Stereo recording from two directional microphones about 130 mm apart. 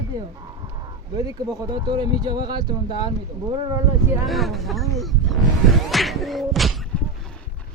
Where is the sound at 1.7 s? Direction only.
35° right (ahead or behind).